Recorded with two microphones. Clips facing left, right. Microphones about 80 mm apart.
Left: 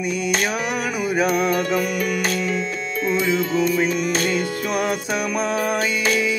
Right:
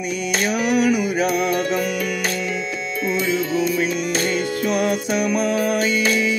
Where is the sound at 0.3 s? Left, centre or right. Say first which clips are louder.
Right 6 dB; left.